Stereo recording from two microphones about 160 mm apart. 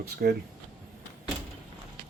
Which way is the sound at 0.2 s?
70° right (ahead or behind).